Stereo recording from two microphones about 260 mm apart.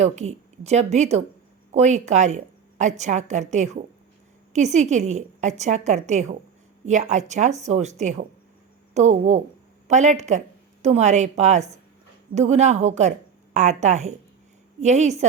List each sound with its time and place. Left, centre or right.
0.0 s a woman's voice: right